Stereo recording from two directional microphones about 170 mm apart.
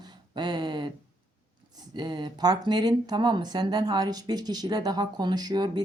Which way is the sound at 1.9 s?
25° right (ahead or behind).